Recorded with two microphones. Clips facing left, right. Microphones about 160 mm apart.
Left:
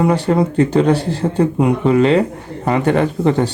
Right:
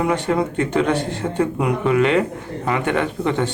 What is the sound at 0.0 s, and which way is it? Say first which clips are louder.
Speech: left 5 dB; 35° left (ahead or behind).